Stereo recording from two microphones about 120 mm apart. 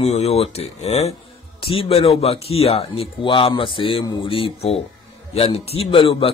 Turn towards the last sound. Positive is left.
turn(degrees=50)  # may be behind; listen again after turning